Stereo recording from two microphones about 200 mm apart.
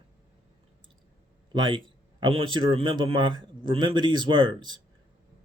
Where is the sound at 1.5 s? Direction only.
25° right (ahead or behind).